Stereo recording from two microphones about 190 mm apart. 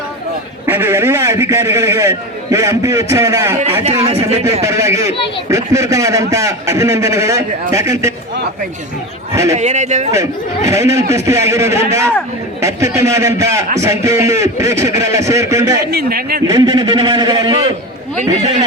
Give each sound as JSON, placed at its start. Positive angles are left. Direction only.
{"t": 0.6, "sound": "a man's voice", "side_deg": -10}
{"t": 4.6, "sound": "a man's voice", "side_deg": -15}
{"t": 9.3, "sound": "a man's voice", "side_deg": -15}
{"t": 9.6, "sound": "speech", "side_deg": -40}
{"t": 10.7, "sound": "a man's voice", "side_deg": -15}
{"t": 15.9, "sound": "a man's voice", "side_deg": -55}
{"t": 16.5, "sound": "a man's voice", "side_deg": -25}